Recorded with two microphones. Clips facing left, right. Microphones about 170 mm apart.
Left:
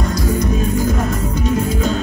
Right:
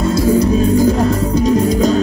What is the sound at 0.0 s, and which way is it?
Music, 30° right (ahead or behind).